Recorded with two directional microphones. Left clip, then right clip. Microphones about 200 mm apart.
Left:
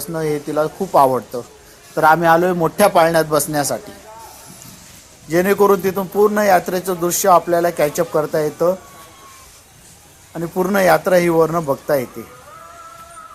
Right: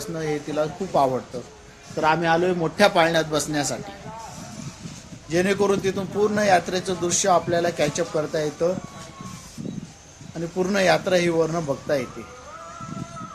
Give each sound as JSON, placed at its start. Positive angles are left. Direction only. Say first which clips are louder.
{"t": 0.1, "sound": "a man's voice", "louder": "left 7 dB", "side_deg": 25}
{"t": 5.3, "sound": "a man's voice", "louder": "left 7 dB", "side_deg": 25}
{"t": 10.8, "sound": "a man's voice", "louder": "left 6 dB", "side_deg": 20}